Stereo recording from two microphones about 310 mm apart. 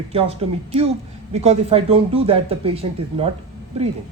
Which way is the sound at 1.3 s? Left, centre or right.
Right.